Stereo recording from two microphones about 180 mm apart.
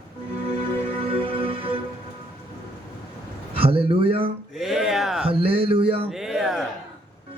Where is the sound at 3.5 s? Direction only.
30° right (ahead or behind).